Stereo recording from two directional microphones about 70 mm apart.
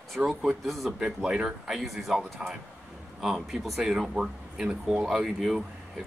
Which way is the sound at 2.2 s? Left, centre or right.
Right.